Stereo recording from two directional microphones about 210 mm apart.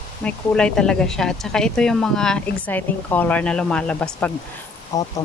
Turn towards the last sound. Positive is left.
turn(degrees=15)  # may be behind; listen again after turning